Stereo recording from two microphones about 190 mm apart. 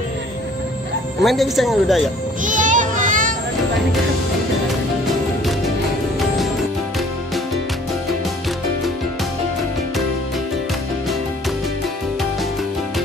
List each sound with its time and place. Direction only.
1.2 s speech: centre (ahead or behind)
2.4 s children playing: 45° right (ahead or behind)
6.1 s music: centre (ahead or behind)